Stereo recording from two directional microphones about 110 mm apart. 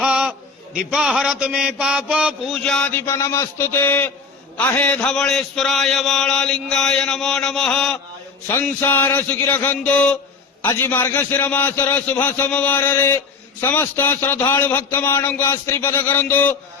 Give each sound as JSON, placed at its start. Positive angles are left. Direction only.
{"t": 0.0, "sound": "a sound", "side_deg": -10}
{"t": 0.9, "sound": "mantra", "side_deg": -5}
{"t": 2.5, "sound": "a man's voice", "side_deg": 5}
{"t": 2.9, "sound": "a man's voice", "side_deg": 25}
{"t": 8.4, "sound": "a man's voice", "side_deg": 20}